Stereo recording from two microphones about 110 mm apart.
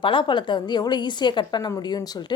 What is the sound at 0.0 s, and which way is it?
Speech, 50° left (ahead or behind).